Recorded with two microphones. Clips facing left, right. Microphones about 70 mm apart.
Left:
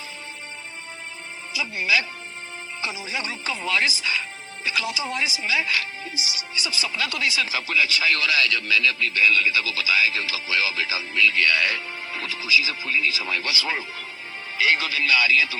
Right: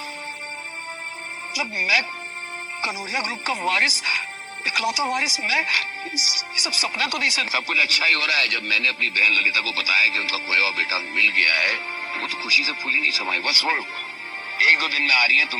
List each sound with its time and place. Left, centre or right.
1.5 s speech: right